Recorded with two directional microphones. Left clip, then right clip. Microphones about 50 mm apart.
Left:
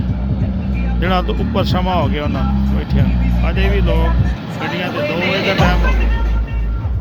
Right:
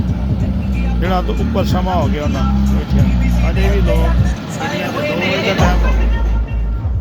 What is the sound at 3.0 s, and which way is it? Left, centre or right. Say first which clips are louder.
Speech: right 2 dB; right.